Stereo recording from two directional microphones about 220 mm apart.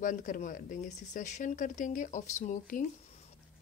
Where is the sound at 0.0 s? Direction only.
35° left (ahead or behind).